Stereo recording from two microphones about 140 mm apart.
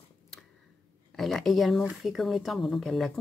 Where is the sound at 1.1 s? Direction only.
5° left (ahead or behind).